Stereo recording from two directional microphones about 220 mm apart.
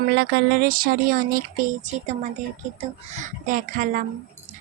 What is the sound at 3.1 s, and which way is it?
Speech, 35° right (ahead or behind).